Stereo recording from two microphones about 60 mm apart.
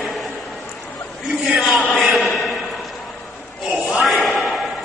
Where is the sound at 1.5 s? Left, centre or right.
Centre.